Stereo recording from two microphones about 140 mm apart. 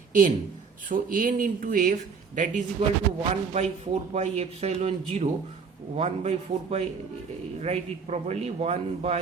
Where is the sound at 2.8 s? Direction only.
45° right (ahead or behind).